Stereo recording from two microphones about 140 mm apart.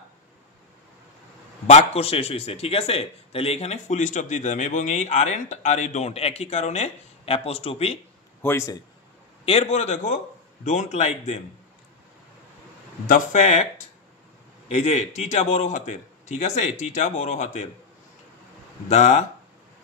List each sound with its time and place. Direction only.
1.7 s speech: 50° left (ahead or behind)
8.4 s a man's voice: 15° left (ahead or behind)
9.5 s speech: 50° left (ahead or behind)
13.0 s a man's voice: 70° left (ahead or behind); by 13.7 s 55° left (ahead or behind)
14.7 s a man's voice: 50° left (ahead or behind)
18.9 s speech: 50° left (ahead or behind)